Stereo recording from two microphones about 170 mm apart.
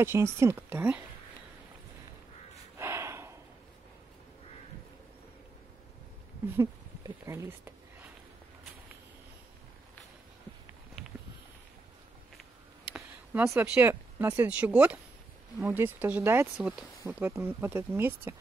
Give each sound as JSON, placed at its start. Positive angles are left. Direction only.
{"t": 0.0, "sound": "speech", "side_deg": -15}
{"t": 2.8, "sound": "gasp", "side_deg": -15}
{"t": 6.4, "sound": "speech", "side_deg": -15}
{"t": 11.0, "sound": "a sound", "side_deg": 0}
{"t": 12.9, "sound": "speech", "side_deg": -10}